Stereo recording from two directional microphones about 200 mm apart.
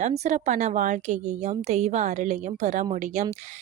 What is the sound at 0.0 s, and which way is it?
Speech, 35° right (ahead or behind).